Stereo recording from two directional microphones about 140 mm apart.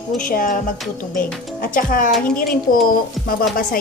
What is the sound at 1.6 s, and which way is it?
Speech, 85° left.